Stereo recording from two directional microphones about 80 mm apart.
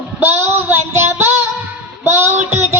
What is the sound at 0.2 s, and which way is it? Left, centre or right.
Child singing, right.